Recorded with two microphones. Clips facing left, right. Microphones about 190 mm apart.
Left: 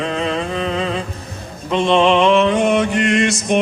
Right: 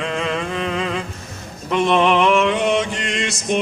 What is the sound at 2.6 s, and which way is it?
Mantra, 55° left (ahead or behind).